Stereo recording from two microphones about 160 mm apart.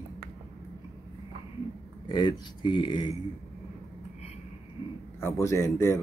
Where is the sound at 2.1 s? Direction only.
30° left (ahead or behind).